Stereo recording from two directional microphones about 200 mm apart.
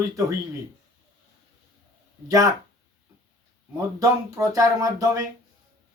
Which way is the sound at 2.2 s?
15° right (ahead or behind).